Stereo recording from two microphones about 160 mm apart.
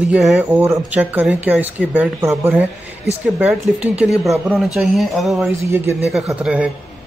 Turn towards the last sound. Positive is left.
turn(degrees=-10)  # may be behind; listen again after turning